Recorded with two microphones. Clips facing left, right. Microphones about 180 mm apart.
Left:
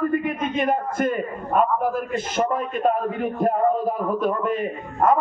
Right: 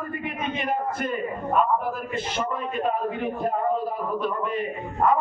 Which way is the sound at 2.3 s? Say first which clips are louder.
Left 6 dB; 45° left (ahead or behind).